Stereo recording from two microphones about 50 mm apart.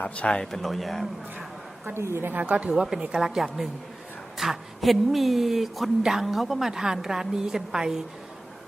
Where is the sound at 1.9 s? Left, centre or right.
Right.